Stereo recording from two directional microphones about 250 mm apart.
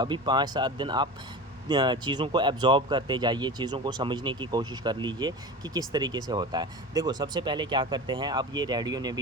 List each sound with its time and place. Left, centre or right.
0.0 s speech: centre